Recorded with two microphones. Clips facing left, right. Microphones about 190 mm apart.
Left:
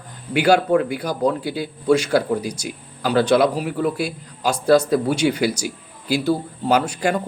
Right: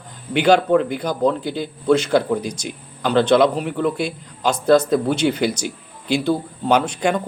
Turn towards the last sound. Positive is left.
turn(degrees=5)  # may be behind; listen again after turning